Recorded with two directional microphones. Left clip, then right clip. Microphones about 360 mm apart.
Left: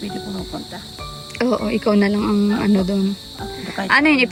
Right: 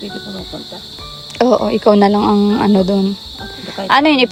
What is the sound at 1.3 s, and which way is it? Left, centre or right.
Speech, centre.